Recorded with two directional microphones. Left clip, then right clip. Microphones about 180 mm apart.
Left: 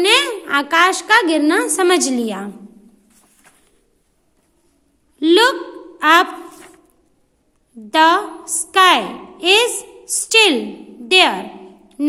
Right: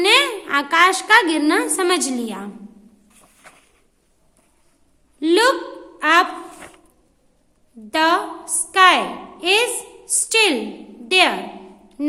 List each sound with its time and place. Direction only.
0.0 s a woman's voice: 20° left (ahead or behind)
5.2 s a woman's voice: 25° left (ahead or behind)
7.9 s a woman's voice: 25° left (ahead or behind)